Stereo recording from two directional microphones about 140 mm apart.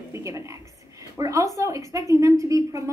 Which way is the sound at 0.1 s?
20° right (ahead or behind).